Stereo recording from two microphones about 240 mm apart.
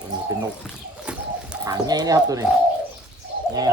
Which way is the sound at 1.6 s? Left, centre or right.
Centre.